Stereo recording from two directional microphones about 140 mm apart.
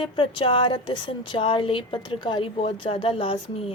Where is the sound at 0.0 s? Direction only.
40° left (ahead or behind).